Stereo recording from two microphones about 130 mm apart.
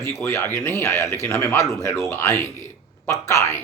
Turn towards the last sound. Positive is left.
turn(degrees=25)  # may be behind; listen again after turning